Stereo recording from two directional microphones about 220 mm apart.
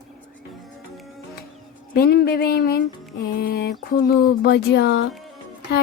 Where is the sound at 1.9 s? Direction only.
45° left (ahead or behind).